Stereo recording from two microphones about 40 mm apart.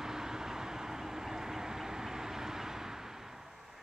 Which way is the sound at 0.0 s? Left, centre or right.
Centre.